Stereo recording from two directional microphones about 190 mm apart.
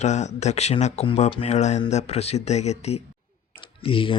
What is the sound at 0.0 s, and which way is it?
Speech, 35° left (ahead or behind).